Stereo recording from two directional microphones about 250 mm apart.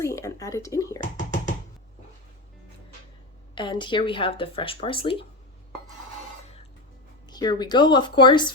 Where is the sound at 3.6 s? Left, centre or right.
Centre.